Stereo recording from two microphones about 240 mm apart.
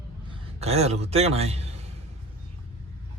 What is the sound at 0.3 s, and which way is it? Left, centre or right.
A man's voice, right.